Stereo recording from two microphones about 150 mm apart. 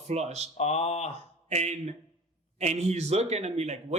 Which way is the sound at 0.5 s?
45° left (ahead or behind).